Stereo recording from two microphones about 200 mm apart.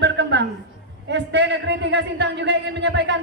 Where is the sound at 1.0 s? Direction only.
60° right (ahead or behind).